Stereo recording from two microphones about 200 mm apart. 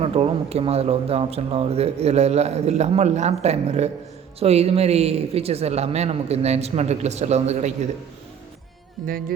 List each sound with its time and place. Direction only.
0.0 s speech: 30° right (ahead or behind)